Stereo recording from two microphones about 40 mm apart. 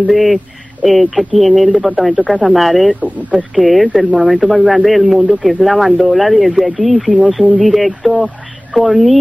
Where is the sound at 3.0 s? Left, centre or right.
Right.